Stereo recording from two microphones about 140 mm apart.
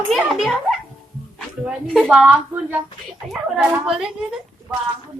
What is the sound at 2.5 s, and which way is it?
A woman's voice, 10° right (ahead or behind).